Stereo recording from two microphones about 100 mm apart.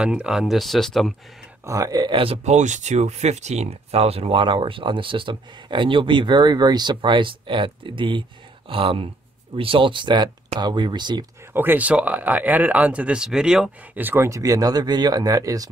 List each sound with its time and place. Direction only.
0.0 s speech: 10° right (ahead or behind)
1.7 s speech: 40° right (ahead or behind)
2.1 s speech: 70° right (ahead or behind)
3.0 s speech: 90° right; by 11.2 s 50° right (ahead or behind)
11.5 s speech: 20° right (ahead or behind)
13.9 s speech: 20° right (ahead or behind); by 15.7 s 35° right (ahead or behind)